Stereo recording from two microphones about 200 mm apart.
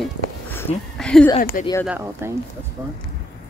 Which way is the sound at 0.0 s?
10° left (ahead or behind).